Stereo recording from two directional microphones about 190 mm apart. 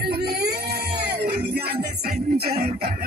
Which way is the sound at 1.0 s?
55° right (ahead or behind).